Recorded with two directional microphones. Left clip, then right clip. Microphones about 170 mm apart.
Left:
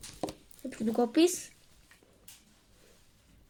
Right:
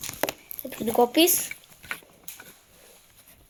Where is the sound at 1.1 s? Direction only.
5° left (ahead or behind).